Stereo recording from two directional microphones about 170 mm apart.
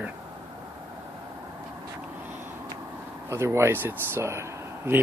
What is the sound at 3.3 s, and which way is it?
Speech, 15° right (ahead or behind).